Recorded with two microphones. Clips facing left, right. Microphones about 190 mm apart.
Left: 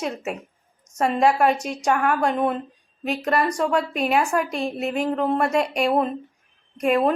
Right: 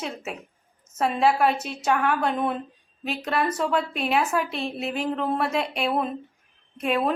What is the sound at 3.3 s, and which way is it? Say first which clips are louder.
A woman's voice: left 3 dB; 5° right (ahead or behind).